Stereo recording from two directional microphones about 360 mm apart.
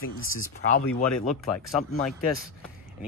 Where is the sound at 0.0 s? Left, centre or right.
Left.